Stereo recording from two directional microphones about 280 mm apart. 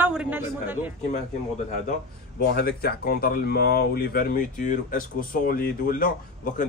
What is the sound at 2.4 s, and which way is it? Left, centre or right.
A man's voice, left.